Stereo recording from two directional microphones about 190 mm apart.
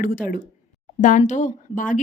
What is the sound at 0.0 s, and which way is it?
A woman's voice, 45° left (ahead or behind).